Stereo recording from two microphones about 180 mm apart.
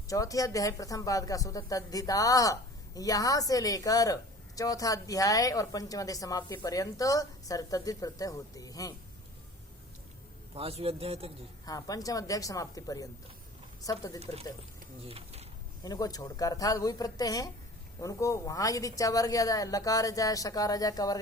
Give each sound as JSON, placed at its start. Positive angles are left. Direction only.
{"t": 0.1, "sound": "speech", "side_deg": 20}
{"t": 10.5, "sound": "a man's voice", "side_deg": -35}
{"t": 11.6, "sound": "speech", "side_deg": 20}
{"t": 15.0, "sound": "speech", "side_deg": -35}
{"t": 15.8, "sound": "speech", "side_deg": 20}